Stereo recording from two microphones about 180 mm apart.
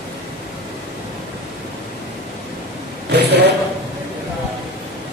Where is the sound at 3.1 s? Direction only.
65° right (ahead or behind).